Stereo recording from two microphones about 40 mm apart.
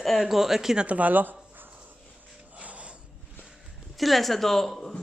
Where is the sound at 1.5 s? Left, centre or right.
Right.